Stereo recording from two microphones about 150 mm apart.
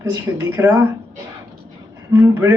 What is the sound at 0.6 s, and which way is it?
Speech, 15° right (ahead or behind).